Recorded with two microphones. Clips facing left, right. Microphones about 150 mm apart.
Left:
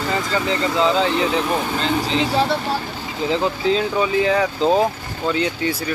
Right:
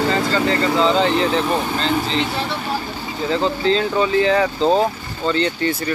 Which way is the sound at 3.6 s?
5° left (ahead or behind).